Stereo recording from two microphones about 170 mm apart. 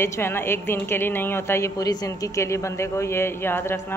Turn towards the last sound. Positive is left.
turn(degrees=15)  # may be behind; listen again after turning